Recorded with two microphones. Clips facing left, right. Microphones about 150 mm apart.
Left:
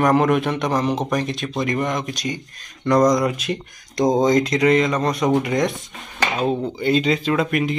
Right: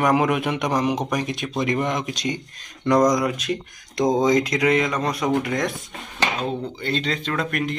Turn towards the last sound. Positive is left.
turn(degrees=5)  # may be behind; listen again after turning